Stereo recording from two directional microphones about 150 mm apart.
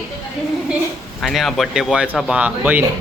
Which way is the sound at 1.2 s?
Centre (ahead or behind).